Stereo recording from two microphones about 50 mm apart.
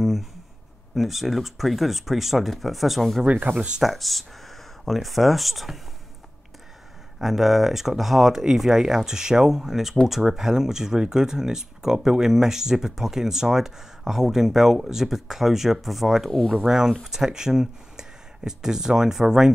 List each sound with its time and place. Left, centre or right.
0.0 s a sound: centre
0.9 s speech: centre
3.3 s speech: right
3.8 s a sound: centre
5.0 s speech: centre
7.2 s speech: centre
16.3 s speech: centre
16.6 s speech: centre